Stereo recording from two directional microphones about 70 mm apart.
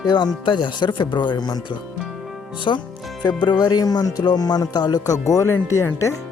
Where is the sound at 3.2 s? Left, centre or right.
Left.